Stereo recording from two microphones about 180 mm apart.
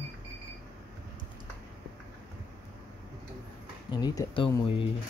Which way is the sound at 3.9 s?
25° left (ahead or behind).